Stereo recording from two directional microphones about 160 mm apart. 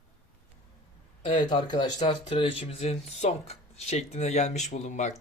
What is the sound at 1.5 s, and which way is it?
Speech, 30° left (ahead or behind).